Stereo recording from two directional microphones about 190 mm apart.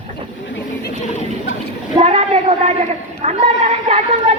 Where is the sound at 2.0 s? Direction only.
35° right (ahead or behind).